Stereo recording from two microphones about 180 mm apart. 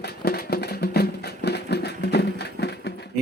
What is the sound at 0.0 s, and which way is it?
Music, 60° left (ahead or behind).